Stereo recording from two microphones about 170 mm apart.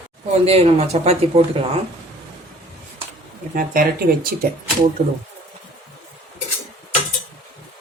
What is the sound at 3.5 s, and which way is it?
Speech, 55° right (ahead or behind).